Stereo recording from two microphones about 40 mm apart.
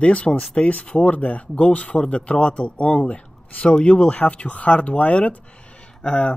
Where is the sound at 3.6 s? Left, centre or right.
Left.